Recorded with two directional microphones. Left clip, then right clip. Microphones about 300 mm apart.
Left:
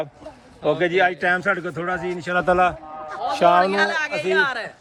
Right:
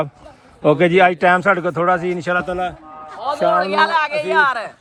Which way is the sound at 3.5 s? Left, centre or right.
Centre.